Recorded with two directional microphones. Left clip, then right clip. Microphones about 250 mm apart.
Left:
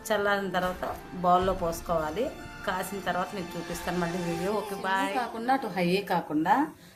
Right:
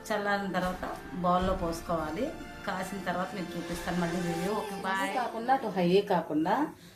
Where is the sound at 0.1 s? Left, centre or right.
Left.